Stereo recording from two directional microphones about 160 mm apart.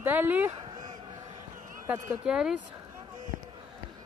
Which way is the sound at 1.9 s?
5° right (ahead or behind).